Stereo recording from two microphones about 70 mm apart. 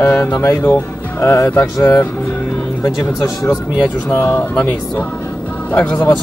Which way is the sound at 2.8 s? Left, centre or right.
Left.